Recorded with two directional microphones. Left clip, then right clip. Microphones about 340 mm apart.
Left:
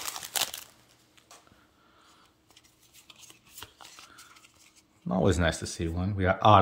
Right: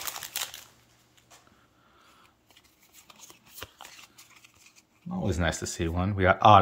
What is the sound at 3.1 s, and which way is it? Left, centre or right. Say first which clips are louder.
Shuffling cards: right 1 dB; centre.